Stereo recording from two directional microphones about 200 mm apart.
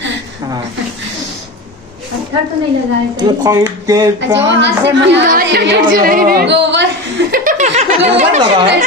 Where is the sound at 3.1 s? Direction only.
20° right (ahead or behind).